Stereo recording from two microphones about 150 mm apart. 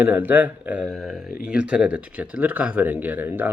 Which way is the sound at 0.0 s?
10° right (ahead or behind).